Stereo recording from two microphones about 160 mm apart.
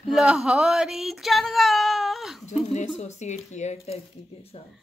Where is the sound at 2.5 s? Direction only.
45° left (ahead or behind).